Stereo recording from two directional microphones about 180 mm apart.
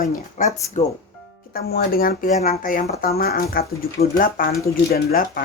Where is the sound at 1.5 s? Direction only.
60° left (ahead or behind).